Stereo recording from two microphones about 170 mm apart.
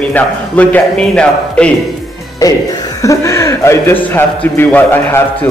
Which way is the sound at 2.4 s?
20° left (ahead or behind).